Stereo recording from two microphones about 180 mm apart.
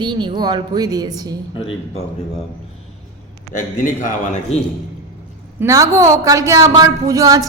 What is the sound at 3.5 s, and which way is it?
A man's voice, 45° left (ahead or behind).